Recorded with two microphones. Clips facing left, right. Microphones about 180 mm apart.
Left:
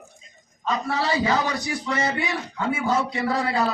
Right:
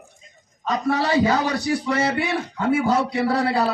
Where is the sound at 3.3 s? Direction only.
35° right (ahead or behind).